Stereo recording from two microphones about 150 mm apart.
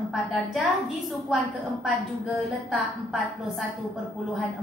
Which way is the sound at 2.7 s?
Centre (ahead or behind).